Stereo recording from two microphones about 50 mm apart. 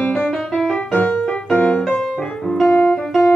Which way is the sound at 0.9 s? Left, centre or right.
Left.